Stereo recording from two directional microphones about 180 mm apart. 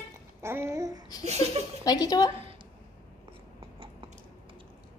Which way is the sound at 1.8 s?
20° left (ahead or behind).